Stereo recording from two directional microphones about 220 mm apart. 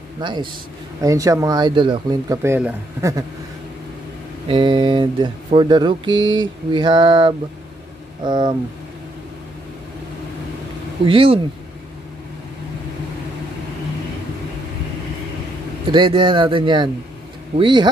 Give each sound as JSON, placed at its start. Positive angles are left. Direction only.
{"t": 0.2, "sound": "speech", "side_deg": -20}
{"t": 4.5, "sound": "speech", "side_deg": -20}
{"t": 6.1, "sound": "a sound", "side_deg": -60}
{"t": 6.4, "sound": "speech", "side_deg": -20}
{"t": 11.1, "sound": "speech", "side_deg": -25}
{"t": 15.9, "sound": "speech", "side_deg": -20}